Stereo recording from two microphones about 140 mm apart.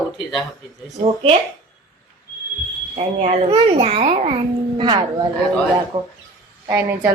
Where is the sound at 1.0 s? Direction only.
45° right (ahead or behind).